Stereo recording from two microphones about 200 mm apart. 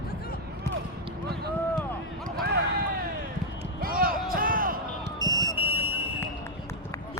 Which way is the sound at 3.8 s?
45° right (ahead or behind).